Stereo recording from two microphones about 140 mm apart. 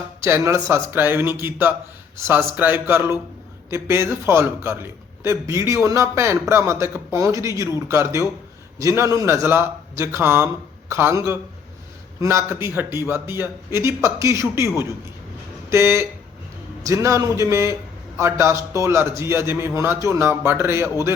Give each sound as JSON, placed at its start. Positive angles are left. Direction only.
{"t": 0.2, "sound": "a man's voice", "side_deg": -20}
{"t": 15.7, "sound": "a man's voice", "side_deg": -20}